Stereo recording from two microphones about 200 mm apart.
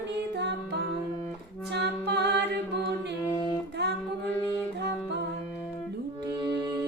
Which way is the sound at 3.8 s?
55° right (ahead or behind).